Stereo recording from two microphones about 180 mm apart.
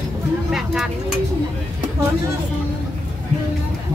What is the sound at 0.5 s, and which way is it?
Vehicle, centre (ahead or behind).